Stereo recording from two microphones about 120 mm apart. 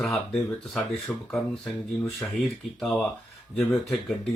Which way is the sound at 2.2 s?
10° left (ahead or behind).